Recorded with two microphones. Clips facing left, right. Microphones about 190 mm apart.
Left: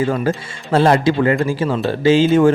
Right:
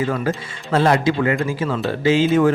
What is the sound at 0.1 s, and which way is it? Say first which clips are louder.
Speech: left 3 dB; 30° left (ahead or behind).